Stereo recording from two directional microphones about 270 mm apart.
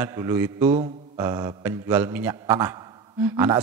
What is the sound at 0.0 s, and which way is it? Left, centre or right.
A man's voice, centre.